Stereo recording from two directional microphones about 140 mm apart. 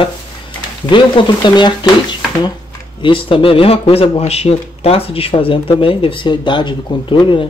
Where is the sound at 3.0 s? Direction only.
40° left (ahead or behind).